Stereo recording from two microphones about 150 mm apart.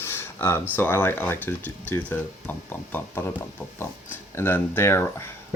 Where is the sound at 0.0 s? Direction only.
15° left (ahead or behind).